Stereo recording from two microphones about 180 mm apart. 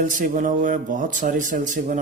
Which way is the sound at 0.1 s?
45° right (ahead or behind).